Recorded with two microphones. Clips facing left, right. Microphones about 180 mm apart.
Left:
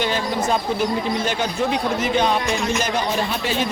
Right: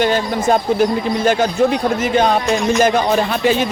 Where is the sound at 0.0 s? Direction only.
50° right (ahead or behind).